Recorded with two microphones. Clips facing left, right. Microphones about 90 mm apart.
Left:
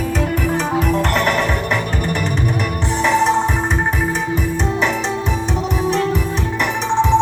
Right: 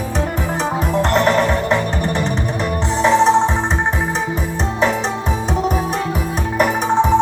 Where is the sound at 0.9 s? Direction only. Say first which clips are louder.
Right 5 dB; 30° right (ahead or behind).